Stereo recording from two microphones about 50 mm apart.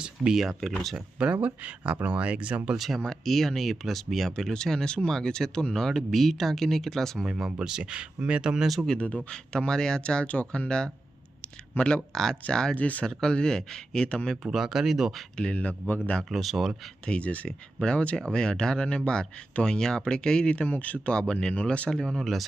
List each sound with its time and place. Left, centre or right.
0.2 s speech: centre
0.9 s speech: right
2.7 s speech: centre
4.4 s speech: centre
7.3 s speech: centre
9.0 s speech: left
12.1 s speech: centre
12.7 s speech: left
13.1 s speech: centre
14.4 s speech: centre
15.4 s speech: left
16.3 s speech: centre
17.1 s speech: left
21.1 s speech: centre